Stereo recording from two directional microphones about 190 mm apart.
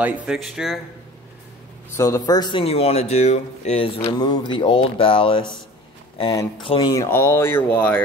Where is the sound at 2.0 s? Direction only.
15° left (ahead or behind).